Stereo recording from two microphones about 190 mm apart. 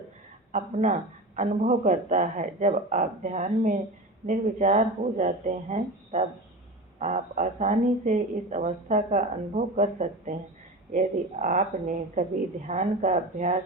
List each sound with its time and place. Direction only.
0.5 s speech: 40° right (ahead or behind)
12.6 s speech: 40° right (ahead or behind)